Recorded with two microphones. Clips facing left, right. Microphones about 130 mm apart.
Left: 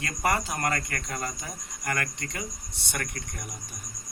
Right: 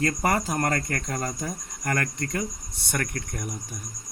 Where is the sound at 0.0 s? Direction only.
45° right (ahead or behind).